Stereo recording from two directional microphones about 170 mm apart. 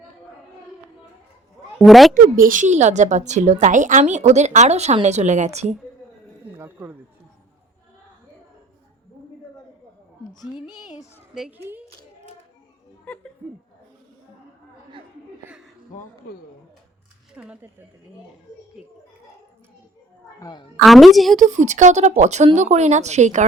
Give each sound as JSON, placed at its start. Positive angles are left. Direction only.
{"t": 1.8, "sound": "a woman's voice", "side_deg": 0}
{"t": 2.3, "sound": "a woman's voice", "side_deg": -55}
{"t": 6.6, "sound": "speech", "side_deg": -10}
{"t": 10.4, "sound": "a child's voice", "side_deg": 25}
{"t": 11.3, "sound": "a woman's voice", "side_deg": -5}
{"t": 13.1, "sound": "speech", "side_deg": 5}
{"t": 17.3, "sound": "speech", "side_deg": -5}
{"t": 20.4, "sound": "a child's voice", "side_deg": 25}
{"t": 20.8, "sound": "a woman's voice", "side_deg": 0}
{"t": 21.3, "sound": "a woman's voice", "side_deg": -45}